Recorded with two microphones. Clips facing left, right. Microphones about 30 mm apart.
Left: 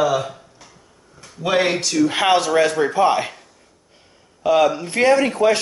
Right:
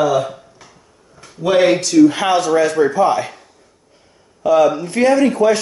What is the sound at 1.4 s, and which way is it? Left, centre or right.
Speech, centre.